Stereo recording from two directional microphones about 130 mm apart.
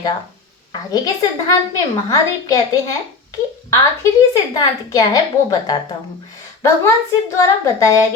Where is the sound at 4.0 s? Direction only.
25° left (ahead or behind).